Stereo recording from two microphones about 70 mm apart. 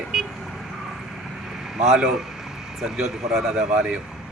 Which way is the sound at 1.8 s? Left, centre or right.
Centre.